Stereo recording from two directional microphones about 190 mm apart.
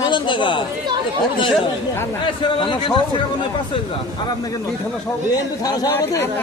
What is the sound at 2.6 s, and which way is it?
Speech, 25° left (ahead or behind).